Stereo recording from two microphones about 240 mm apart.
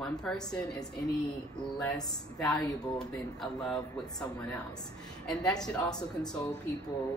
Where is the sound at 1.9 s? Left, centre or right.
Centre.